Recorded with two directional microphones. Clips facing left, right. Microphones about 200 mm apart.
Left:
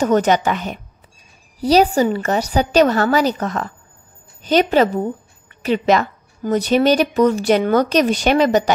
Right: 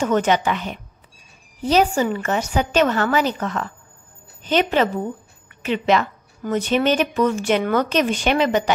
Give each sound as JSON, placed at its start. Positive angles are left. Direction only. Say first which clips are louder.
{"t": 0.0, "sound": "a woman's voice", "louder": "left 3 dB", "side_deg": 40}